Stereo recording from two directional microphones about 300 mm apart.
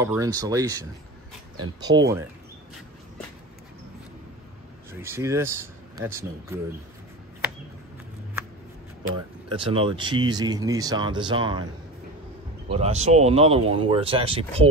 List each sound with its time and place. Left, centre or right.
0.0 s speech: centre
5.0 s speech: centre
9.5 s speech: centre
12.6 s speech: centre